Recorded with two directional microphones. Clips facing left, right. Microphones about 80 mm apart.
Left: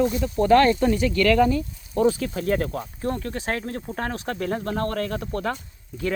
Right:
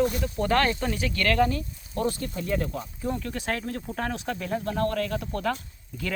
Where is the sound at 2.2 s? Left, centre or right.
Left.